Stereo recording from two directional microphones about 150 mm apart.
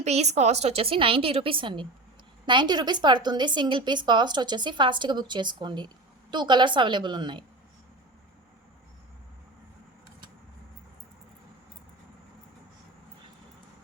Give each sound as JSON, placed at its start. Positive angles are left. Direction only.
{"t": 0.0, "sound": "a woman's voice", "side_deg": -45}